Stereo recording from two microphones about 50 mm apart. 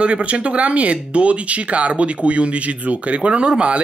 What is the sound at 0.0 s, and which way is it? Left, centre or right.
Speech, right.